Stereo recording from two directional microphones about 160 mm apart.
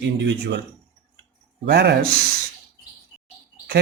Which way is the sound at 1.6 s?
90° right.